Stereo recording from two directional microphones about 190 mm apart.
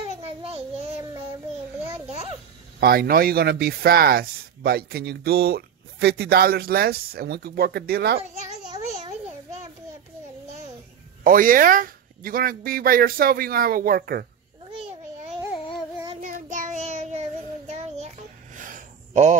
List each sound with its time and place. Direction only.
0.0 s child singing: 30° right (ahead or behind)
2.8 s speech: 55° right (ahead or behind)
11.2 s speech: 50° right (ahead or behind)
14.7 s babbling: 30° right (ahead or behind)
15.5 s babbling: 25° left (ahead or behind)
16.2 s child singing: 45° right (ahead or behind)
17.6 s a sound: 35° right (ahead or behind)